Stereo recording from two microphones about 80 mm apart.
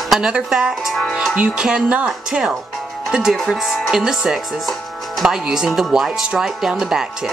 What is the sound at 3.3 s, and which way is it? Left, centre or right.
Speech, centre.